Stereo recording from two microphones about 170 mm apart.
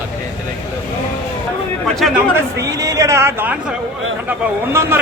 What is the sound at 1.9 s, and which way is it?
Speech, centre (ahead or behind).